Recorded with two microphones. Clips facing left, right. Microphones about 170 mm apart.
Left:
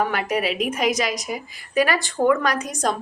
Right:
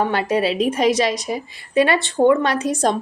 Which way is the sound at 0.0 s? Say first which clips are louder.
Right 4 dB; 30° right (ahead or behind).